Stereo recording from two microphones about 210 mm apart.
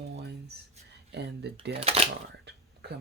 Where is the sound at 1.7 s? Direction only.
30° right (ahead or behind).